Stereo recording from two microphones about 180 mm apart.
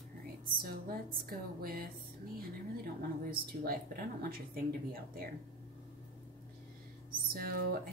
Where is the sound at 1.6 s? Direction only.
55° right (ahead or behind).